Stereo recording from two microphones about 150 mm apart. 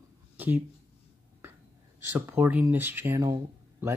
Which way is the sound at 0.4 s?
15° right (ahead or behind).